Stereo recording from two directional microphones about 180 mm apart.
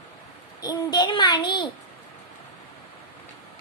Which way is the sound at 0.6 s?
20° left (ahead or behind).